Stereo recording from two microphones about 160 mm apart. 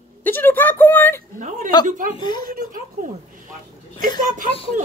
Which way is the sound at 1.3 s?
50° right (ahead or behind).